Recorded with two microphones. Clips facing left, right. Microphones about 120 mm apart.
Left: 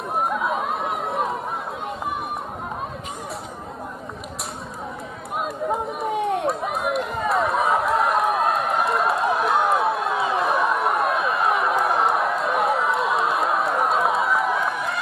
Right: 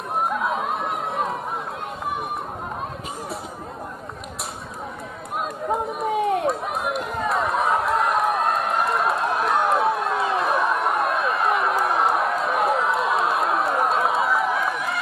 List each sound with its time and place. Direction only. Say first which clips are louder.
0.2 s chatter: even; centre (ahead or behind)
5.4 s run: even; centre (ahead or behind)